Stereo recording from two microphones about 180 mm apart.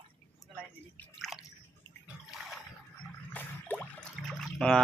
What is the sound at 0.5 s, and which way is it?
Drip, 5° left (ahead or behind).